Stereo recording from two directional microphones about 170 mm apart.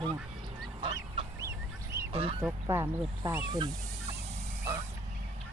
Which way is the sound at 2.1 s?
35° right (ahead or behind).